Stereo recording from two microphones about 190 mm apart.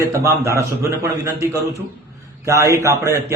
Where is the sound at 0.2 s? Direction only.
15° right (ahead or behind).